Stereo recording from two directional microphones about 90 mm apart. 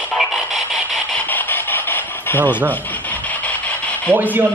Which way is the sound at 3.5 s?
15° left (ahead or behind).